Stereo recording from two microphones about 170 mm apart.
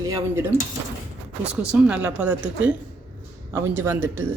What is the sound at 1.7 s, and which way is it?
A woman's voice, 10° right (ahead or behind).